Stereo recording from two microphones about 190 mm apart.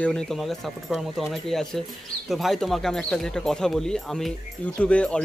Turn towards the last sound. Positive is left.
turn(degrees=5)  # may be behind; listen again after turning